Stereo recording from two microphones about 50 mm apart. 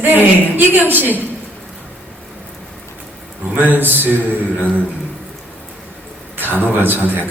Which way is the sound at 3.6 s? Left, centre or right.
Right.